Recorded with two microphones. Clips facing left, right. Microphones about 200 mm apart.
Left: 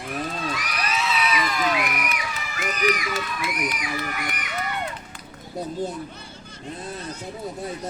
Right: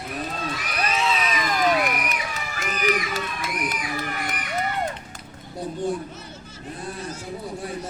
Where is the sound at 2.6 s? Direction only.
35° right (ahead or behind).